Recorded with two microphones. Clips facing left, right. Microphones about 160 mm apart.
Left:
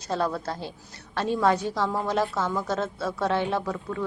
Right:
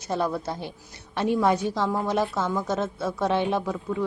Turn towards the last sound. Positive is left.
turn(degrees=-10)  # may be behind; listen again after turning